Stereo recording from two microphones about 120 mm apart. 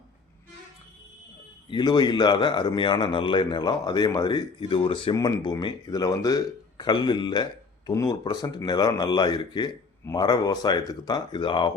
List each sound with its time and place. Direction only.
1.7 s speech: 35° left (ahead or behind)
5.1 s speech: 35° left (ahead or behind)